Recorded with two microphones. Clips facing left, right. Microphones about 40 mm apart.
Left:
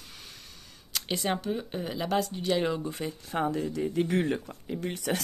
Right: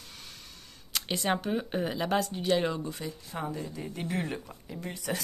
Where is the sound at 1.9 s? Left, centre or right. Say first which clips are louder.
Left 3 dB; centre.